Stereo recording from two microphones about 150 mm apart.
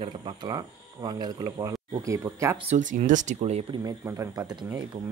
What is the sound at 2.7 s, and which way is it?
Speech, 50° right (ahead or behind).